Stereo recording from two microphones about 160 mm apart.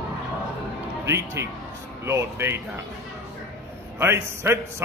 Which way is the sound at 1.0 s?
20° right (ahead or behind).